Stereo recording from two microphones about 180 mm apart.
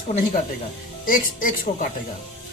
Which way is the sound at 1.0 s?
50° left (ahead or behind).